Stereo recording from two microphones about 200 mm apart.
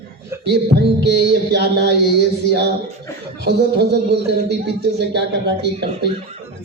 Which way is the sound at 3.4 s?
55° right (ahead or behind).